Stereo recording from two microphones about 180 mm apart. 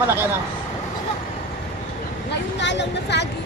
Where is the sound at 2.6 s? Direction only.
75° left (ahead or behind).